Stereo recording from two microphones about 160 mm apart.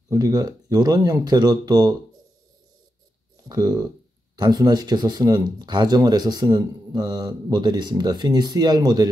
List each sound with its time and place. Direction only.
0.1 s speech: 25° right (ahead or behind)
3.4 s speech: 25° right (ahead or behind)